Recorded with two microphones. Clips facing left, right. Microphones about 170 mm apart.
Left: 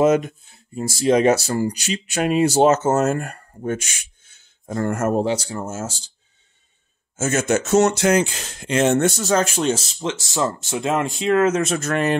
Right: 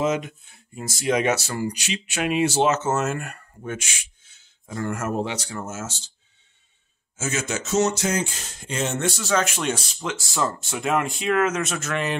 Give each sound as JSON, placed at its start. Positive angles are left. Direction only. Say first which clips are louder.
{"t": 0.0, "sound": "speech", "louder": "left 7 dB", "side_deg": 50}
{"t": 0.5, "sound": "speech", "louder": "left 7 dB", "side_deg": 30}
{"t": 7.2, "sound": "speech", "louder": "left 8 dB", "side_deg": 50}